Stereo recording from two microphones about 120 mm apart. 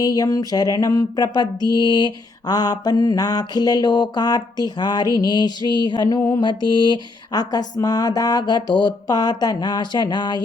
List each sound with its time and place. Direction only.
0.0 s mantra: 30° left (ahead or behind)